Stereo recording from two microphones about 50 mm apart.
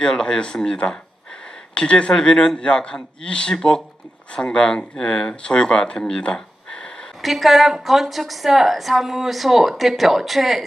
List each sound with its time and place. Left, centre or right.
0.0 s speech: centre
7.2 s a woman's voice: centre